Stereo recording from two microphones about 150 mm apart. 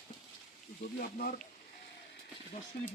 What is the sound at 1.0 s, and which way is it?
Speech, 70° left (ahead or behind).